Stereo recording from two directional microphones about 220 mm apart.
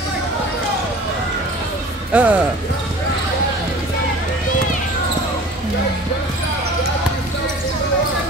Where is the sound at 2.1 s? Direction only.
5° right (ahead or behind).